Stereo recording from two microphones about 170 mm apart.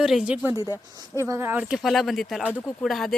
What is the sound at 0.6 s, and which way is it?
Speech, 15° left (ahead or behind).